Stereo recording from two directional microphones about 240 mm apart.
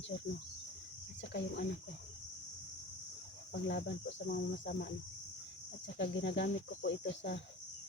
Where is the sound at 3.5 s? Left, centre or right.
Left.